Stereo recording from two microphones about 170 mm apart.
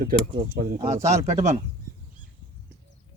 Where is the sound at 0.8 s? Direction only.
40° right (ahead or behind).